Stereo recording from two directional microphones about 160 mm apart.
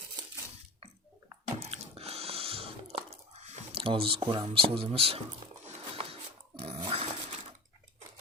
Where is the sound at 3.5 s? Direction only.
35° right (ahead or behind).